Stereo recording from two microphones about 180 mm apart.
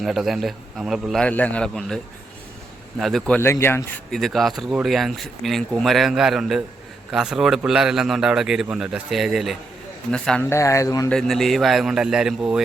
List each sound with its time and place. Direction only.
0.0 s speech: centre (ahead or behind)
3.0 s speech: centre (ahead or behind)
10.5 s speech: 15° left (ahead or behind)
11.1 s speech: centre (ahead or behind)